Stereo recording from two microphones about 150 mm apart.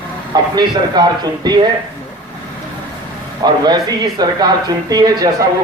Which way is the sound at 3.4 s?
25° right (ahead or behind).